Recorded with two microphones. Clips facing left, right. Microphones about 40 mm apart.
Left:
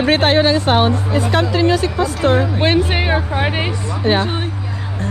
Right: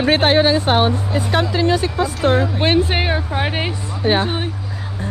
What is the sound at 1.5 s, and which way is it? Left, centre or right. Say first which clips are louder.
Speech: left 3 dB; left.